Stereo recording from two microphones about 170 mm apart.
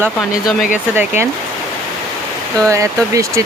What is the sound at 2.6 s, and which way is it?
Speech, 20° right (ahead or behind).